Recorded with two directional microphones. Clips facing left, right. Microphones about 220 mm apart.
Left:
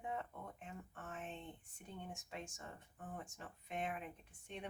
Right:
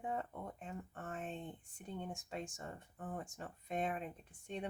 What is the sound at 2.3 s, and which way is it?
Speech, 40° right (ahead or behind).